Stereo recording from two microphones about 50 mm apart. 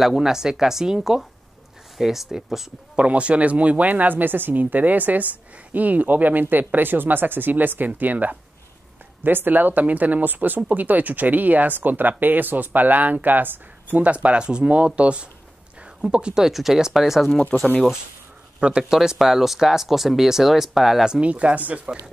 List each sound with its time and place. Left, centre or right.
0.0 s speech: centre
3.0 s speech: right
16.4 s speech: centre
17.3 s speech: left
18.6 s speech: right
18.9 s speech: centre
21.1 s speech: right